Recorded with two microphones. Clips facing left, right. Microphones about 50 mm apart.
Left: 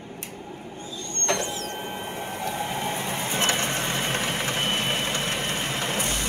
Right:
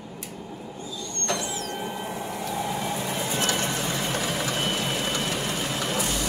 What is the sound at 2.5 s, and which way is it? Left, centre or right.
Vehicle, left.